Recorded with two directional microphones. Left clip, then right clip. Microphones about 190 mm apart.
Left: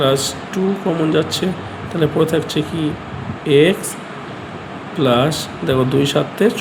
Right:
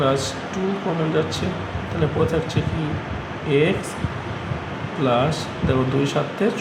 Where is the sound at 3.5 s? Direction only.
50° left (ahead or behind).